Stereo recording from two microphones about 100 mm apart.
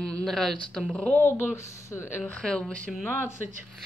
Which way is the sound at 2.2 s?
5° left (ahead or behind).